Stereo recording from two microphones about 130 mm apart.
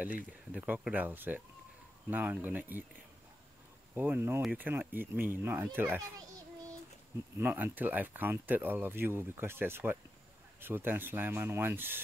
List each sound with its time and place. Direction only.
0.5 s speech: 10° right (ahead or behind)
3.9 s speech: 15° right (ahead or behind)
7.3 s speech: 15° right (ahead or behind)